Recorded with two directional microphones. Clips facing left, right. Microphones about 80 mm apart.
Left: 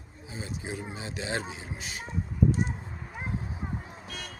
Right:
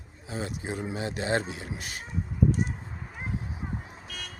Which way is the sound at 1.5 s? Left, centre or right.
Right.